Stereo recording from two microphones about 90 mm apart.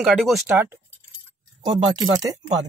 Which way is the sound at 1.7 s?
55° right (ahead or behind).